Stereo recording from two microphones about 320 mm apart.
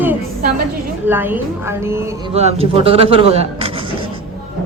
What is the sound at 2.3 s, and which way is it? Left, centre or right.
Speech, centre.